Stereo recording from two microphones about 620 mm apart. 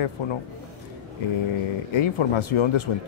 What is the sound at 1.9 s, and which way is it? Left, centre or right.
Speech, left.